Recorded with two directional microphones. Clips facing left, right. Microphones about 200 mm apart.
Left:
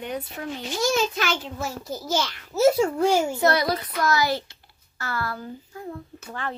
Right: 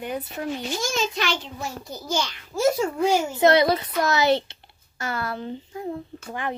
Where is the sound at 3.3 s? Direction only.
20° right (ahead or behind).